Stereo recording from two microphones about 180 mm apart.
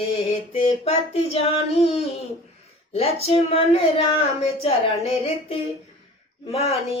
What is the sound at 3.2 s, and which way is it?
A woman's voice, 35° left (ahead or behind).